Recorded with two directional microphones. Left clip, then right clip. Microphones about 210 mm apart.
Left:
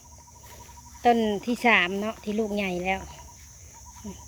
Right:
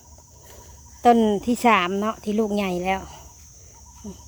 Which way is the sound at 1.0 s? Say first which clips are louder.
Right 5 dB; 25° right (ahead or behind).